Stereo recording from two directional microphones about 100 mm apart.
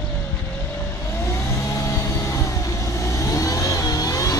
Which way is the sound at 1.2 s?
30° left (ahead or behind).